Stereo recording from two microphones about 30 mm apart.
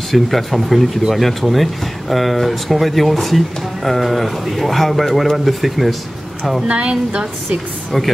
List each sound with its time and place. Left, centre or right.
0.1 s speech: centre
6.7 s a woman's voice: right